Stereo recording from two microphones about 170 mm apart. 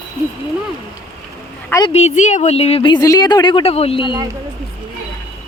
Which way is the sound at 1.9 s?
40° left (ahead or behind).